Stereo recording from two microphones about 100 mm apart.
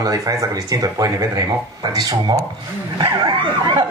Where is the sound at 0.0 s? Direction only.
35° right (ahead or behind).